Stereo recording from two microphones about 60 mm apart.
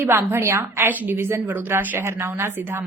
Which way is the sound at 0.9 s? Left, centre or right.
Right.